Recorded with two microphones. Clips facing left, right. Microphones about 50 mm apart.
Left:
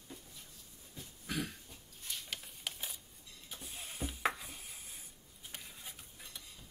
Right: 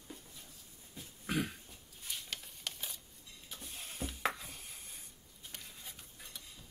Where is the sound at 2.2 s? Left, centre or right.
Centre.